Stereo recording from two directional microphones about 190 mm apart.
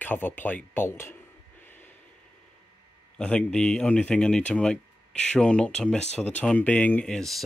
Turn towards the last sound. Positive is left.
turn(degrees=0)  # may be behind; listen again after turning